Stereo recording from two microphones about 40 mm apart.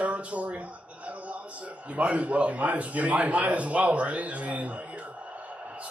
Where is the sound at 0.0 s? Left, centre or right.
Right.